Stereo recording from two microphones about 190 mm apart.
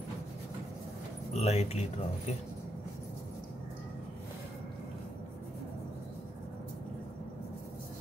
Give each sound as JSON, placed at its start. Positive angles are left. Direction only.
{"t": 1.3, "sound": "speech", "side_deg": 35}